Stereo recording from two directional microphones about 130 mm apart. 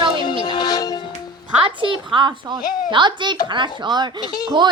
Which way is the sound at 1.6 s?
40° right (ahead or behind).